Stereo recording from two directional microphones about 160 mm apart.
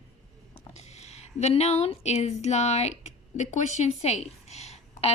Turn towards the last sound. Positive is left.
turn(degrees=40)  # may be behind; listen again after turning